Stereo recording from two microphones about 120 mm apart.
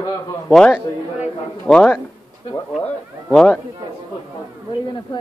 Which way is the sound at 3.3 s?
5° left (ahead or behind).